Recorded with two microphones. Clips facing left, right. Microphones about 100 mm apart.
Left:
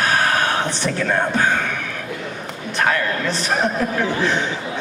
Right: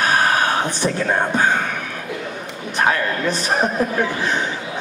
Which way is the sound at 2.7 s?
15° right (ahead or behind).